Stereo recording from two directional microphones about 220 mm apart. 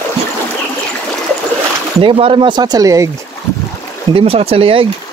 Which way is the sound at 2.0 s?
25° right (ahead or behind).